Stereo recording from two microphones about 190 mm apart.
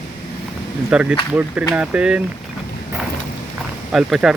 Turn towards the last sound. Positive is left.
turn(degrees=0)  # may be behind; listen again after turning